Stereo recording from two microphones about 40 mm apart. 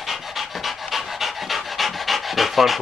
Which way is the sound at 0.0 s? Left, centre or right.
Centre.